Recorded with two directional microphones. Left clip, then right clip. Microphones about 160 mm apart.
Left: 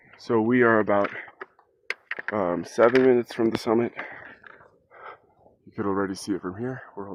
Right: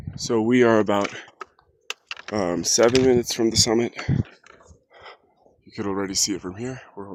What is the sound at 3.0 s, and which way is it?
Speech, 20° right (ahead or behind).